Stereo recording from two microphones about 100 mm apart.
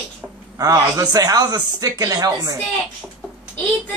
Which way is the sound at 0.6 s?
40° right (ahead or behind).